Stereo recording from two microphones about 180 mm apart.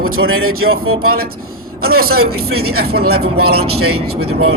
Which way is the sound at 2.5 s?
60° right (ahead or behind).